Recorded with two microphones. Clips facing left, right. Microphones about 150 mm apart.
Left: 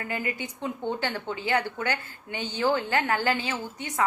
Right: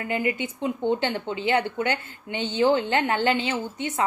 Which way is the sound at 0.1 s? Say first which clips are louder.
Right 8 dB; 20° right (ahead or behind).